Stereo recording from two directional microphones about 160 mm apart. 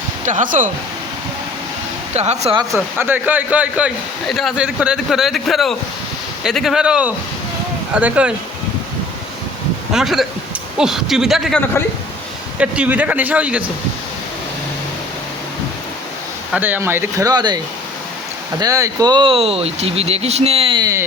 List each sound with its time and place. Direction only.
0.3 s speech: 55° right (ahead or behind)
2.1 s speech: 45° right (ahead or behind)
3.0 s a man's voice: 10° right (ahead or behind)
9.9 s a man's voice: centre (ahead or behind)
16.5 s a man's voice: 10° right (ahead or behind)
18.6 s speech: 20° right (ahead or behind)